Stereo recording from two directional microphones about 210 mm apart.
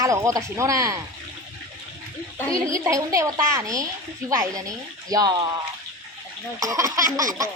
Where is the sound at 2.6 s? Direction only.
15° right (ahead or behind).